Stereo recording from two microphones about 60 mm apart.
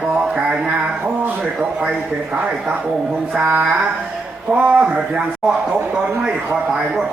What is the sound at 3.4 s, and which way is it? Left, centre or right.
Speech, right.